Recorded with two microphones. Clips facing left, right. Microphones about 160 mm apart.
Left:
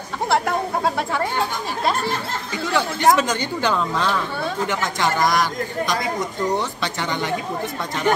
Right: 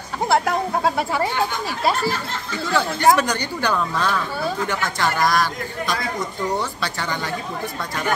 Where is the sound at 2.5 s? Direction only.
15° left (ahead or behind).